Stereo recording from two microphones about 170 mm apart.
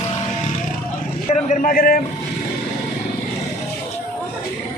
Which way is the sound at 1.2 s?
45° left (ahead or behind).